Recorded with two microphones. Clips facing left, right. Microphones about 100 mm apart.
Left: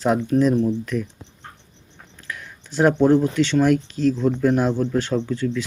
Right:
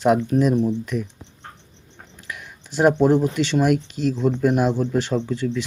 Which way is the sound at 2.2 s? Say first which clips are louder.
Left 1 dB; 15° right (ahead or behind).